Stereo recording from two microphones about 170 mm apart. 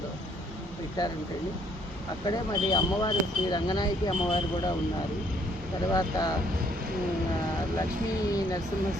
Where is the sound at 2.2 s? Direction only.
25° left (ahead or behind).